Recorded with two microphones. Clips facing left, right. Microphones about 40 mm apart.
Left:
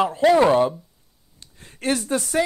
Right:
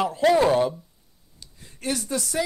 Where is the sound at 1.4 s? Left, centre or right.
Left.